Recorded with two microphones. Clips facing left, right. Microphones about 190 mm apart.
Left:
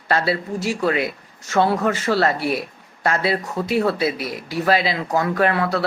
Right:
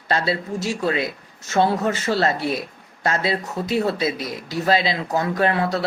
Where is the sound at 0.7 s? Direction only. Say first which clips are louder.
Left 2 dB; 25° right (ahead or behind).